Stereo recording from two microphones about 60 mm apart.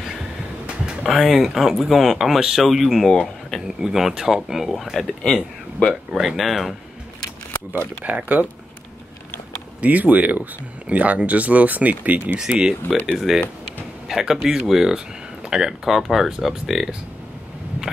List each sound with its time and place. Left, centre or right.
1.0 s speech: centre
5.2 s speech: centre
6.2 s speech: centre
8.0 s speech: right
9.8 s speech: right
12.4 s speech: centre